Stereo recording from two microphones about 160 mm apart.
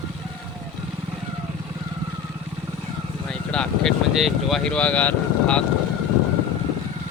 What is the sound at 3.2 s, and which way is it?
Speech, 5° left (ahead or behind).